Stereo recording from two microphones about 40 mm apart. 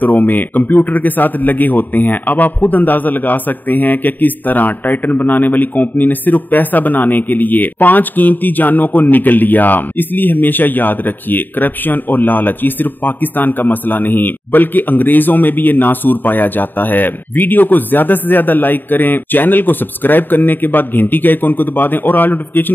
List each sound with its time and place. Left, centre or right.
0.0 s a man's voice: left